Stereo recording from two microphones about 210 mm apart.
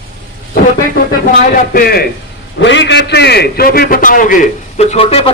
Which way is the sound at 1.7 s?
50° left (ahead or behind).